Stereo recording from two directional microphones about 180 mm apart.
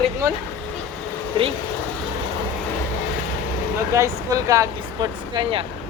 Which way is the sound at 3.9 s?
15° right (ahead or behind).